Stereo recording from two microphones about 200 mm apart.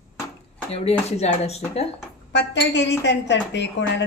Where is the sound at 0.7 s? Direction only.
30° left (ahead or behind).